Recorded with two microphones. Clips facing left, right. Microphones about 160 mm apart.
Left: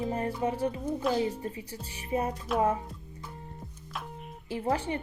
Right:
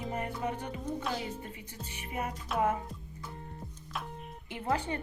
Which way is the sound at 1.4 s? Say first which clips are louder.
Left 6 dB; 35° left (ahead or behind).